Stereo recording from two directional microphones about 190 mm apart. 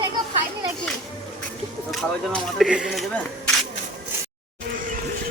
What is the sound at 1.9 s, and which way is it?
Speech, centre (ahead or behind).